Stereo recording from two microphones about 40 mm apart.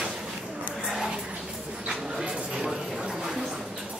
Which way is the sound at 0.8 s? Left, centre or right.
Centre.